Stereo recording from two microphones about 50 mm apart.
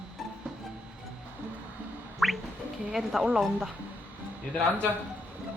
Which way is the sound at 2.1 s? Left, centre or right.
Centre.